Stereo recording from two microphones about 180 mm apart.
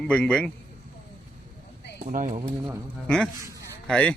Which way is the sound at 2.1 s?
50° right (ahead or behind).